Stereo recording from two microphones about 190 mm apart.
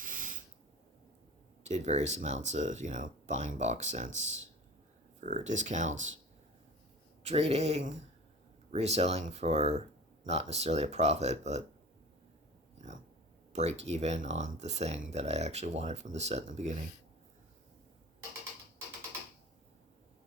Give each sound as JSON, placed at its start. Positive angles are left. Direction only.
{"t": 0.0, "sound": "a sound", "side_deg": -45}
{"t": 1.6, "sound": "speech", "side_deg": -35}
{"t": 7.2, "sound": "speech", "side_deg": -35}
{"t": 13.5, "sound": "speech", "side_deg": -35}